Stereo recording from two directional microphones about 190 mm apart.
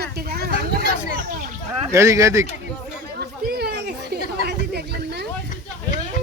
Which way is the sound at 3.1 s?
55° right (ahead or behind).